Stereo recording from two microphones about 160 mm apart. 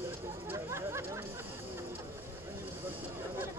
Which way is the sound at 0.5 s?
15° right (ahead or behind).